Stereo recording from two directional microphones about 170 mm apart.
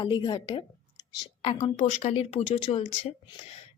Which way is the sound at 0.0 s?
25° left (ahead or behind).